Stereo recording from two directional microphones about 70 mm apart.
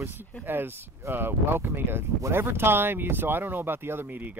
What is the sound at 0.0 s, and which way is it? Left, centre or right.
Speech, right.